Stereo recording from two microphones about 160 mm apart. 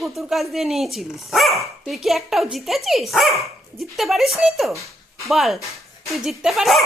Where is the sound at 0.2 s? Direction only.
Centre (ahead or behind).